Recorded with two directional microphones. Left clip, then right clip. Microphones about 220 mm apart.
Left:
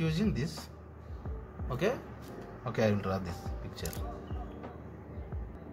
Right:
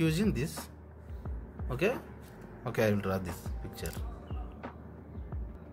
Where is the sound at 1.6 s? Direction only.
30° right (ahead or behind).